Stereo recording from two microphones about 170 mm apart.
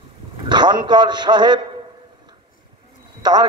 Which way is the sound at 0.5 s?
25° right (ahead or behind).